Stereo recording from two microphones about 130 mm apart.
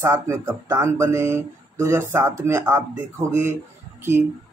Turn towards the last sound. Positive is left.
turn(degrees=-20)  # may be behind; listen again after turning